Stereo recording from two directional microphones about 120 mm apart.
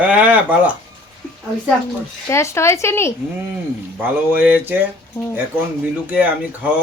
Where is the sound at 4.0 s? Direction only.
15° right (ahead or behind).